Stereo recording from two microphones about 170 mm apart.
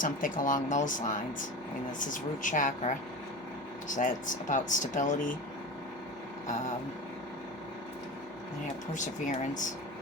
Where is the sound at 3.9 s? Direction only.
50° left (ahead or behind).